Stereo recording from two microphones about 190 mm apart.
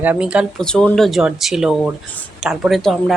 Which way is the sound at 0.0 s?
5° right (ahead or behind).